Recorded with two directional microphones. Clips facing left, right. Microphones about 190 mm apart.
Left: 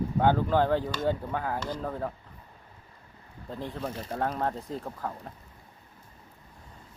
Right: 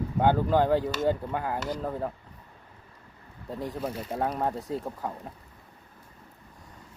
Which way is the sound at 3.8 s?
10° right (ahead or behind).